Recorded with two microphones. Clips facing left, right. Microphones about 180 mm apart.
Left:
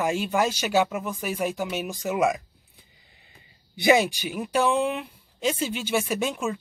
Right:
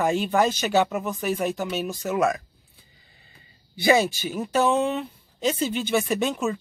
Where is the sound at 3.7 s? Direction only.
15° left (ahead or behind).